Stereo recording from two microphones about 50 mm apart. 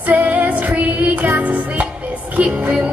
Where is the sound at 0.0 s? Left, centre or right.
Right.